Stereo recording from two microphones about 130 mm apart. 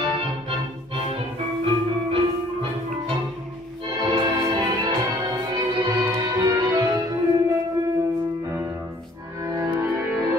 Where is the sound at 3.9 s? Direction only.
35° right (ahead or behind).